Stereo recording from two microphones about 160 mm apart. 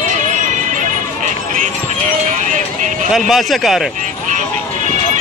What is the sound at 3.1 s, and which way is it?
Speech, centre (ahead or behind).